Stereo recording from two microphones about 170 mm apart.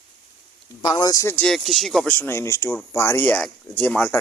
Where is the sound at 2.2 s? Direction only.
15° left (ahead or behind).